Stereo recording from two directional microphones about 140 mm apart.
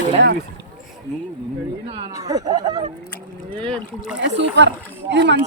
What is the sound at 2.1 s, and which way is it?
Speech, 25° right (ahead or behind).